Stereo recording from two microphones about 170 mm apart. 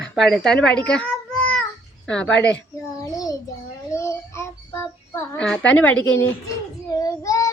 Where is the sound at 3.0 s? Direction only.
20° left (ahead or behind).